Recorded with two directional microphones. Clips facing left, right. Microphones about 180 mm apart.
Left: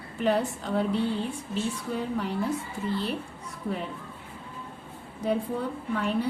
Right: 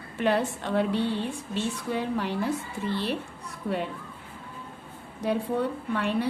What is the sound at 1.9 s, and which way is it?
Speech, 80° right.